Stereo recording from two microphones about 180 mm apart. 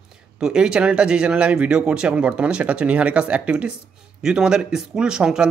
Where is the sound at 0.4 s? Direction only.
5° right (ahead or behind).